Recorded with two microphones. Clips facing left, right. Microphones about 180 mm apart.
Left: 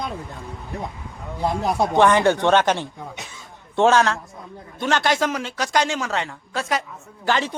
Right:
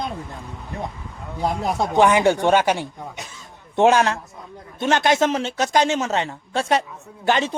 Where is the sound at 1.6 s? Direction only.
10° right (ahead or behind).